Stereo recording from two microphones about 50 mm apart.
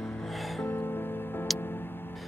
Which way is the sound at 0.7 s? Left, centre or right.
Left.